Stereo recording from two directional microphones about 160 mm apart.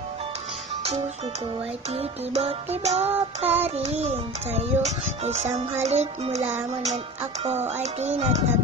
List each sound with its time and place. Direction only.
2.0 s music: 40° right (ahead or behind)
4.0 s a child's voice: 40° right (ahead or behind)